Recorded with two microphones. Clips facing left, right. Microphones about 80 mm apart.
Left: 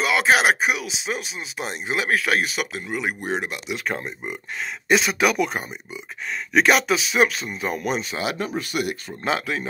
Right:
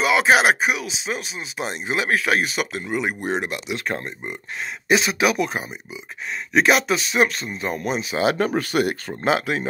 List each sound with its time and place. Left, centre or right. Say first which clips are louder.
0.0 s speech: right 2 dB; centre
8.4 s speech: right 6 dB; right
9.2 s speech: right 4 dB; centre